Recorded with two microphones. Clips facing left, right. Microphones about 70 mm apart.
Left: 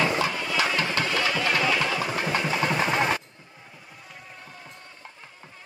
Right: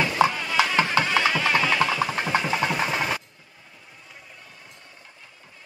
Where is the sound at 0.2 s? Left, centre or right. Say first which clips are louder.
Right 5 dB; right.